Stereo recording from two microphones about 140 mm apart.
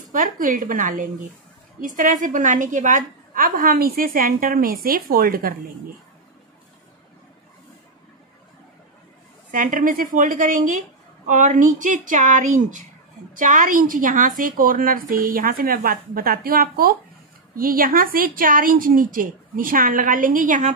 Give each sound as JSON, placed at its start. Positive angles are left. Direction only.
{"t": 0.1, "sound": "a woman's voice", "side_deg": -75}
{"t": 3.3, "sound": "a woman's voice", "side_deg": -90}
{"t": 9.5, "sound": "a woman's voice", "side_deg": -70}